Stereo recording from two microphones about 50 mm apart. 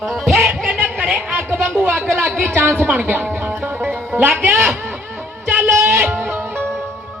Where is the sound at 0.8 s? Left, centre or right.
Right.